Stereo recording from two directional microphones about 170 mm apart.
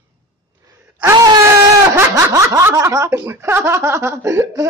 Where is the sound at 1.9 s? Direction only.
20° right (ahead or behind).